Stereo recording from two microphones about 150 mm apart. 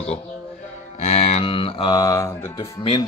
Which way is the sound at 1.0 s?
45° left (ahead or behind).